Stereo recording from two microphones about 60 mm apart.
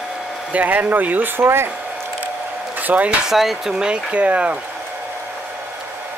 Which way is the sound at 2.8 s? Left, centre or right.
Right.